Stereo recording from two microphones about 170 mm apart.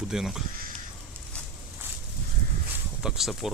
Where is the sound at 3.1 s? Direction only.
Centre (ahead or behind).